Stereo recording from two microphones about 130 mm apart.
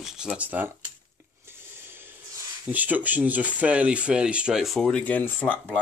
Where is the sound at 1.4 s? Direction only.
15° right (ahead or behind).